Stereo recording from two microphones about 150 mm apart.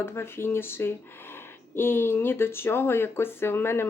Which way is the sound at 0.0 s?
15° left (ahead or behind).